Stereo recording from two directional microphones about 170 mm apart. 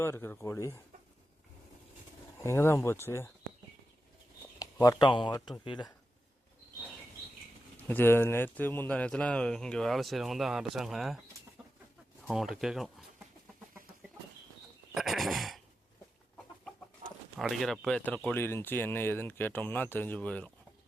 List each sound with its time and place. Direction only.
0.0 s speech: 15° left (ahead or behind)
2.4 s speech: 15° left (ahead or behind)
4.6 s speech: 20° left (ahead or behind)
7.9 s speech: 10° left (ahead or behind)
12.3 s speech: centre (ahead or behind)
14.9 s a sound: centre (ahead or behind)
17.0 s bird: 40° right (ahead or behind)
17.3 s speech: centre (ahead or behind)